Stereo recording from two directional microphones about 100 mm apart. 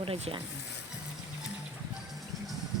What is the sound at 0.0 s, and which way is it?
Speech, 65° right (ahead or behind).